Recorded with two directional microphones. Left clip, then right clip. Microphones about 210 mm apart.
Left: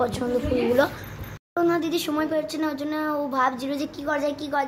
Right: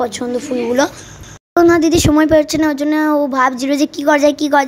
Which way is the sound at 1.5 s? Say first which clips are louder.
Right 12 dB; 45° right (ahead or behind).